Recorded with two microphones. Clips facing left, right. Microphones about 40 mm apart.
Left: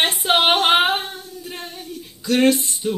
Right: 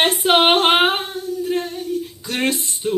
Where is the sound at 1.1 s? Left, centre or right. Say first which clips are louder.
Right 8 dB; left.